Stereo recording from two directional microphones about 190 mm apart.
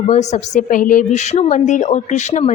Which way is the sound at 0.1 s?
35° left (ahead or behind).